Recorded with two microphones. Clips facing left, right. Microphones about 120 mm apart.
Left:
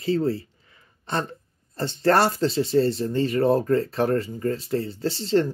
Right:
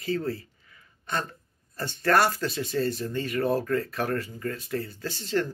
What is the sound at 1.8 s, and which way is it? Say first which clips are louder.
Speech: left 3 dB; 25° left (ahead or behind).